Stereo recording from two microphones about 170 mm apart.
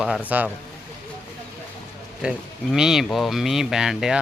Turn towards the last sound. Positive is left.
turn(degrees=-5)  # may be behind; listen again after turning